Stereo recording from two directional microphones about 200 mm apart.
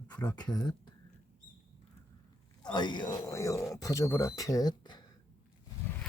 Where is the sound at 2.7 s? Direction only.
20° left (ahead or behind).